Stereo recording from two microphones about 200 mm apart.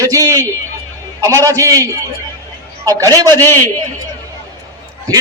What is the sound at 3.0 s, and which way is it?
Speech, 20° right (ahead or behind).